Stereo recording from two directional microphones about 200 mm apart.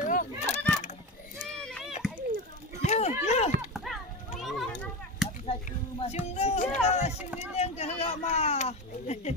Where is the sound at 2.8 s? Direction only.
35° left (ahead or behind).